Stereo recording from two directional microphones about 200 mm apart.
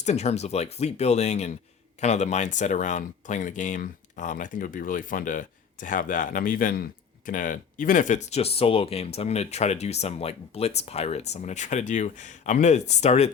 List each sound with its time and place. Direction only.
0.0 s speech: 35° left (ahead or behind)